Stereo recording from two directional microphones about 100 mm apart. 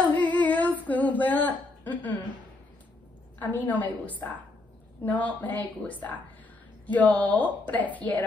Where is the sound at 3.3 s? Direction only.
15° left (ahead or behind).